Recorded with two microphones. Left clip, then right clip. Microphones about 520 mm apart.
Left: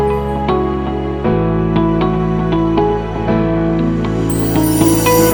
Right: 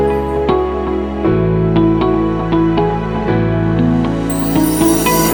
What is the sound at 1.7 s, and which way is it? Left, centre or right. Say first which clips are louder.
Music: right 4 dB; centre.